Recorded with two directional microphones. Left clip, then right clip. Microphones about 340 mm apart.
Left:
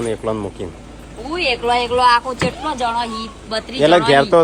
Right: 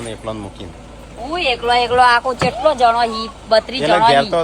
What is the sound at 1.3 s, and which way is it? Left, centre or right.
Speech, centre.